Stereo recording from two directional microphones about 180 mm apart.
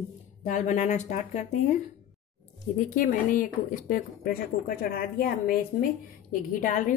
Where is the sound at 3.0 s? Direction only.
45° left (ahead or behind).